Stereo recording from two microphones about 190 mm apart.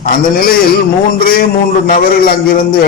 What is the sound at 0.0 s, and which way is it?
A man's voice, 50° left (ahead or behind).